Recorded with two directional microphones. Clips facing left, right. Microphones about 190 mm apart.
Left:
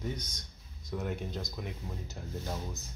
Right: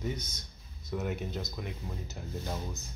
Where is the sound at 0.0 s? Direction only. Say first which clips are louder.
Right 2 dB; 5° right (ahead or behind).